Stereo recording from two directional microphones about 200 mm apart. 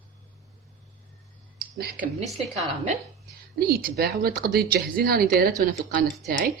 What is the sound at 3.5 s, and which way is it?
Speech, 50° right (ahead or behind).